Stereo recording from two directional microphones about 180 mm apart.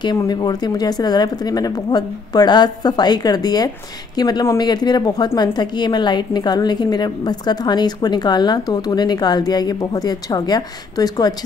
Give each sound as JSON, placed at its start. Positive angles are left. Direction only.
{"t": 0.0, "sound": "speech", "side_deg": 25}